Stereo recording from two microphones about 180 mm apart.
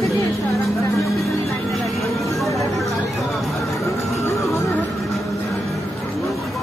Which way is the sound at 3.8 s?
15° left (ahead or behind).